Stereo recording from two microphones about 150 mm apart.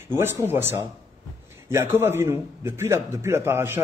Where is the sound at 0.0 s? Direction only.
15° right (ahead or behind).